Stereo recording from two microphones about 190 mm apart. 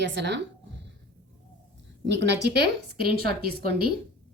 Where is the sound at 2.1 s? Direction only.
65° right (ahead or behind).